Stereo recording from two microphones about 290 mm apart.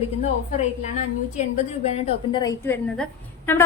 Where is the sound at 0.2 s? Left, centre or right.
Left.